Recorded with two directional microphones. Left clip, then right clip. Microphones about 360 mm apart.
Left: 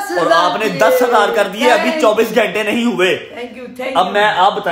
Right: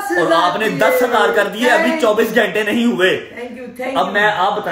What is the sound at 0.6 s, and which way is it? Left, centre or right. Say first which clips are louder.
A man's voice: left 2 dB; centre.